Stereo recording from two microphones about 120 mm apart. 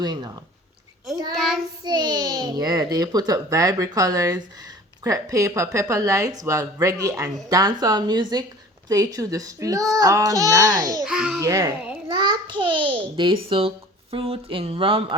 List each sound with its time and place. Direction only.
0.0 s a child's voice: 35° right (ahead or behind)
1.4 s a child's voice: centre (ahead or behind)
1.8 s a child's voice: 35° right (ahead or behind)
11.0 s a child's voice: 5° right (ahead or behind)
11.3 s a child's voice: 30° right (ahead or behind); by 15.0 s 50° right (ahead or behind)